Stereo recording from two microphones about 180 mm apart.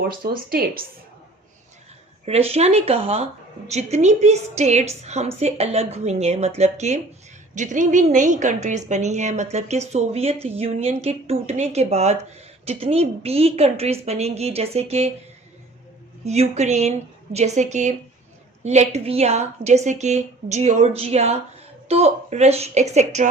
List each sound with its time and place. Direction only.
0.1 s speech: 55° right (ahead or behind)
2.2 s a woman's voice: 35° right (ahead or behind)
16.2 s a woman's voice: 35° right (ahead or behind)